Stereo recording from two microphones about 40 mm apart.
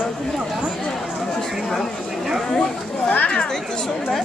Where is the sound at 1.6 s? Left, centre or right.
Centre.